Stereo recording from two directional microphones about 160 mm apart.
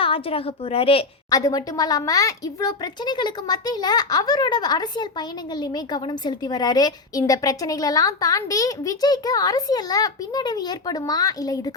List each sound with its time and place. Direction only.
0.0 s a woman's voice: 35° left (ahead or behind)
1.3 s speech: 20° left (ahead or behind)